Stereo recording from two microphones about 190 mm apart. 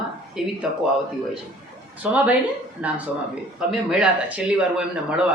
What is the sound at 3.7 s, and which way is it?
Speech, 5° right (ahead or behind).